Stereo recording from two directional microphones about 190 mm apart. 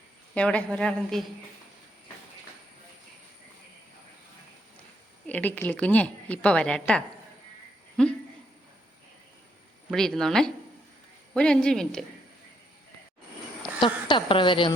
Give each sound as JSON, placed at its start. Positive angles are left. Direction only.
{"t": 0.3, "sound": "speech", "side_deg": 5}
{"t": 5.2, "sound": "a woman's voice", "side_deg": 10}
{"t": 9.9, "sound": "speech", "side_deg": 0}
{"t": 13.8, "sound": "a woman's voice", "side_deg": 25}